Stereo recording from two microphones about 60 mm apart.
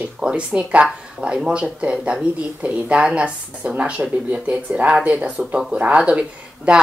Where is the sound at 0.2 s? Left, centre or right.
Right.